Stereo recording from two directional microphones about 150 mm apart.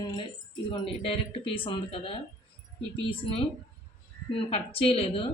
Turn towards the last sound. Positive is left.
turn(degrees=40)  # may be behind; listen again after turning